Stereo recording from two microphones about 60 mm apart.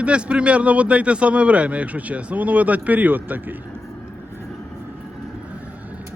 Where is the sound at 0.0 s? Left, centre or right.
Centre.